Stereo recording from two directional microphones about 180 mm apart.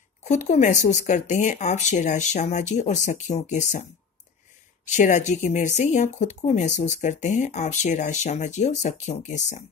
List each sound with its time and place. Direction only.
0.2 s speech: 40° left (ahead or behind)
4.8 s speech: 45° left (ahead or behind)